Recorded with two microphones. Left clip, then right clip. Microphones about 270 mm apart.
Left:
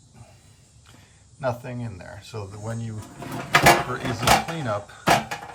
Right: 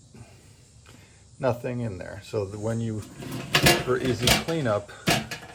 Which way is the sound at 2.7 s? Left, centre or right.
Centre.